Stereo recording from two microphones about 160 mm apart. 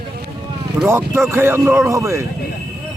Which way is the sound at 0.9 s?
15° right (ahead or behind).